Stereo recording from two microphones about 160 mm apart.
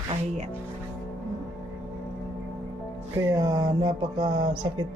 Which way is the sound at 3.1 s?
20° right (ahead or behind).